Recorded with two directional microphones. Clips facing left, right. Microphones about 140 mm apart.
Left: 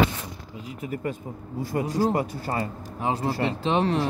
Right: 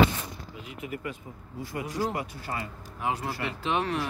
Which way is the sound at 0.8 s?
40° left (ahead or behind).